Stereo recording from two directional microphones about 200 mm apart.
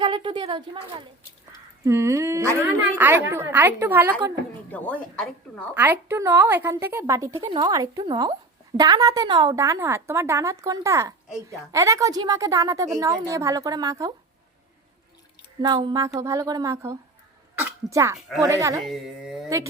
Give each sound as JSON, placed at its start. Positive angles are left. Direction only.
{"t": 0.0, "sound": "a woman's voice", "side_deg": -25}
{"t": 4.7, "sound": "speech", "side_deg": 5}
{"t": 5.7, "sound": "a woman's voice", "side_deg": -10}
{"t": 15.6, "sound": "a woman's voice", "side_deg": -20}
{"t": 18.8, "sound": "speech", "side_deg": 0}